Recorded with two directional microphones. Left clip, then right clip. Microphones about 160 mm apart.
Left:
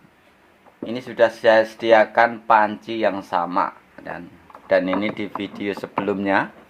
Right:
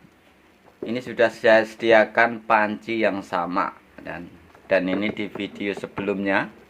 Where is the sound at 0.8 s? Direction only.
10° left (ahead or behind); by 6.4 s 35° left (ahead or behind).